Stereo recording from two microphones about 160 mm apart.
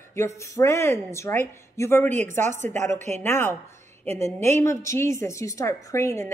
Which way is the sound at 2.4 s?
50° right (ahead or behind).